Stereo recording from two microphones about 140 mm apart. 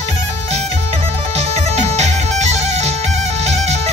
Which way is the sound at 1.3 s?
50° right (ahead or behind).